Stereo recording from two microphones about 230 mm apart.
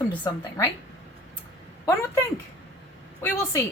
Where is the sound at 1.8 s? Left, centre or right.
Centre.